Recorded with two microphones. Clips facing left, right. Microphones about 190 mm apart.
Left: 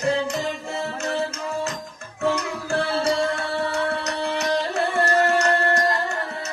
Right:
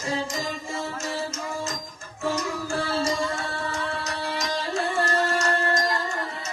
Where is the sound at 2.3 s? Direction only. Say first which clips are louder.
Left 3 dB; 65° left (ahead or behind).